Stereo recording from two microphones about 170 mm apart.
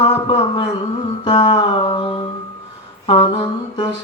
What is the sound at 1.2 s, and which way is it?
Music, 25° left (ahead or behind).